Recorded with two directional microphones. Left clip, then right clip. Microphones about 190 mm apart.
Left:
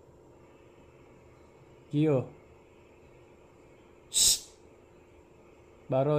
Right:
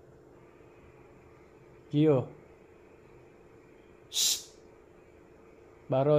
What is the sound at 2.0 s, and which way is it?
Speech, 20° left (ahead or behind).